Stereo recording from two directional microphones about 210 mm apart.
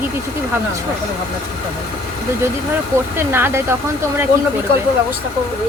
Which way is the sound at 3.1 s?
10° right (ahead or behind).